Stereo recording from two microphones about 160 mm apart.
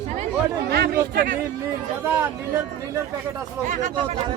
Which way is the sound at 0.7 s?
85° right.